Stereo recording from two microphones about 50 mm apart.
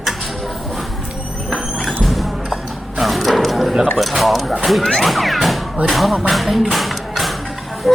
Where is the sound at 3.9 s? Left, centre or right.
Centre.